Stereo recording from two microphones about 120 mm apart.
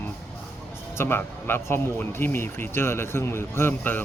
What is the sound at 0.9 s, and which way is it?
Speech, 20° left (ahead or behind).